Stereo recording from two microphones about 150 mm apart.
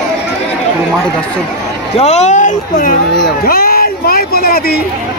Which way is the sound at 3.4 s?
80° left.